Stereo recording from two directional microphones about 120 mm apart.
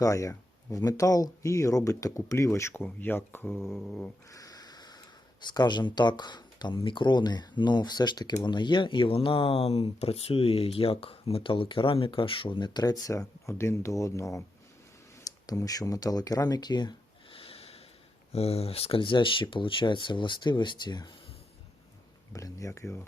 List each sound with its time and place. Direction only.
0.0 s speech: 30° left (ahead or behind)
3.8 s cat: 10° left (ahead or behind)
4.3 s a sound: 30° left (ahead or behind)
5.4 s speech: 40° left (ahead or behind)
17.3 s snort: 55° left (ahead or behind)
18.3 s speech: 55° left (ahead or behind); by 21.1 s 40° left (ahead or behind)
22.3 s speech: 25° left (ahead or behind)